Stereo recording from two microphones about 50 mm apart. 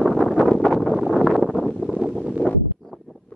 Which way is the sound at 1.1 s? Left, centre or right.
Centre.